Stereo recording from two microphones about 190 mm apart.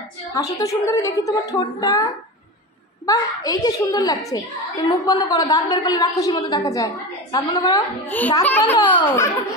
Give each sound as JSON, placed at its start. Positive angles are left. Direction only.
{"t": 0.3, "sound": "a child's voice", "side_deg": 20}
{"t": 3.1, "sound": "a child's voice", "side_deg": 20}